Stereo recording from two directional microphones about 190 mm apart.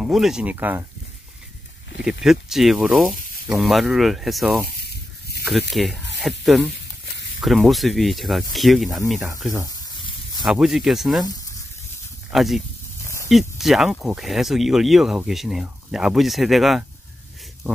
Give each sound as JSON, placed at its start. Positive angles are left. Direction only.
{"t": 0.0, "sound": "speech", "side_deg": 0}
{"t": 2.2, "sound": "speech", "side_deg": 0}
{"t": 9.7, "sound": "snake", "side_deg": 20}
{"t": 10.4, "sound": "speech", "side_deg": 0}
{"t": 12.3, "sound": "speech", "side_deg": 0}